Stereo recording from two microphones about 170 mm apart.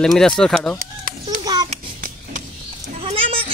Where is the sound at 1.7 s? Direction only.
50° right (ahead or behind).